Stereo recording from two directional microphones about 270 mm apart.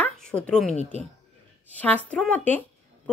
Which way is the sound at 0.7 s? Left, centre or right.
Left.